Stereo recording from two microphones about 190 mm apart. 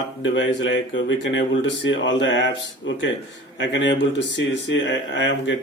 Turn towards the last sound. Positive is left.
turn(degrees=70)  # may be behind; listen again after turning